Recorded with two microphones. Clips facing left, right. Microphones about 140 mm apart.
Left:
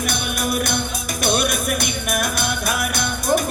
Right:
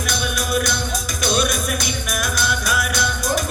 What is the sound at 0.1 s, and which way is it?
Music, 55° left (ahead or behind).